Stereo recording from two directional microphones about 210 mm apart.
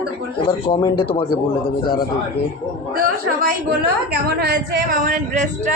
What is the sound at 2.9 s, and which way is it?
A woman's voice, 45° right (ahead or behind).